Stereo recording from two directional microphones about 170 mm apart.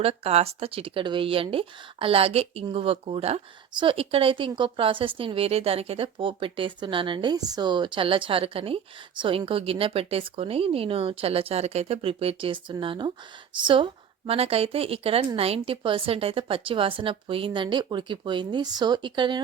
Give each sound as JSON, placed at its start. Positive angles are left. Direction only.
{"t": 0.0, "sound": "speech", "side_deg": -35}